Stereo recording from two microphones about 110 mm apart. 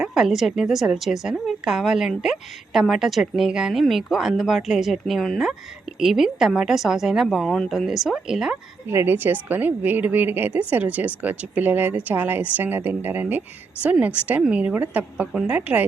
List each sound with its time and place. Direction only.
0.0 s a woman's voice: 5° right (ahead or behind)
8.9 s a woman's voice: 20° right (ahead or behind)